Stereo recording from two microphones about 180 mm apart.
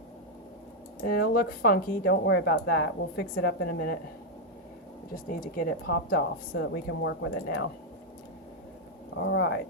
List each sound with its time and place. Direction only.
1.0 s speech: 55° left (ahead or behind)
2.2 s a woman's voice: 65° left (ahead or behind)
5.1 s a woman's voice: 50° left (ahead or behind); by 7.3 s 90° left
9.1 s speech: 80° left